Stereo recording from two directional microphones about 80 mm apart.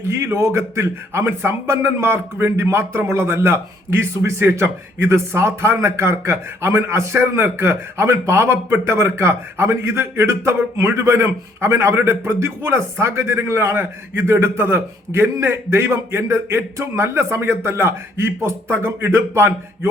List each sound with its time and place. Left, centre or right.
0.1 s a man's voice: right